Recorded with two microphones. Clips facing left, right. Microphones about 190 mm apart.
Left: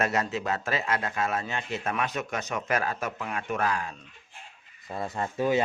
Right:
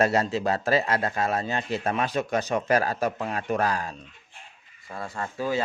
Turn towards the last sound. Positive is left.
turn(degrees=20)  # may be behind; listen again after turning